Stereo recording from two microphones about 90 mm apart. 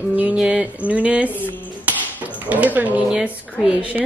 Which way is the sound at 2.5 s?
15° right (ahead or behind).